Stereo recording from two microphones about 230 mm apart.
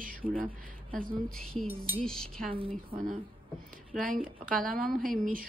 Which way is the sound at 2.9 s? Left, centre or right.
Right.